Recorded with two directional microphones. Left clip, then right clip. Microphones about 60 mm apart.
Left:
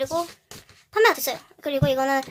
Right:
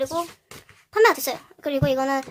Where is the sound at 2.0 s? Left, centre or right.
Centre.